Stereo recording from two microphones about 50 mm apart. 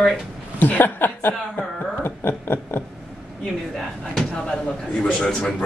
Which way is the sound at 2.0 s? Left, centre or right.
Left.